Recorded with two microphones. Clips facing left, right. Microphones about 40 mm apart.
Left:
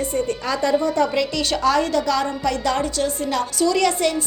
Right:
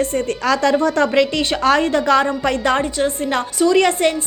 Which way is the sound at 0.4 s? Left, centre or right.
Right.